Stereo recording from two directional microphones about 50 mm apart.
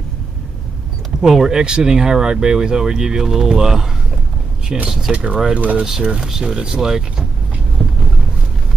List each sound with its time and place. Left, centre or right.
1.2 s speech: centre
4.8 s speech: centre
5.1 s speech: right
6.2 s speech: centre
7.8 s boat: centre